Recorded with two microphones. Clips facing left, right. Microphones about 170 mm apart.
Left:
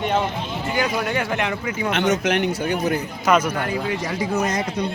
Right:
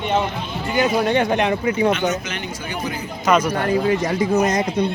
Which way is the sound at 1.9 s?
75° left (ahead or behind).